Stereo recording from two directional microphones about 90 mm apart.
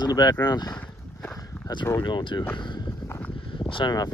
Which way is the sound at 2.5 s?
60° left (ahead or behind).